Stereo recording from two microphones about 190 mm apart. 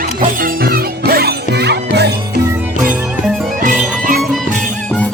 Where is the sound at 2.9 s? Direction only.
Centre (ahead or behind).